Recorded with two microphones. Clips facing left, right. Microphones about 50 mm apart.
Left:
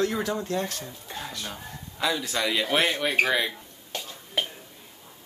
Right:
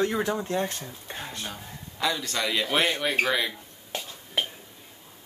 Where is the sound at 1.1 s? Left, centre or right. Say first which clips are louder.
Even; right.